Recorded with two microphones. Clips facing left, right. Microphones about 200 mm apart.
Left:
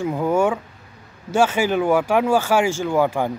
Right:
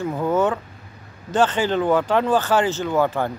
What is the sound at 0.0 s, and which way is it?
Speech, 10° left (ahead or behind).